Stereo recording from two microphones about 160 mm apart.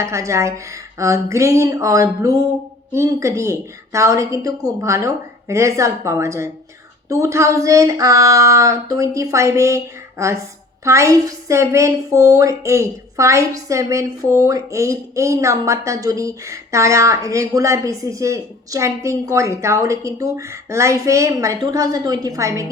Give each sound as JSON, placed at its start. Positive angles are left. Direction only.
{"t": 0.0, "sound": "a woman's voice", "side_deg": -20}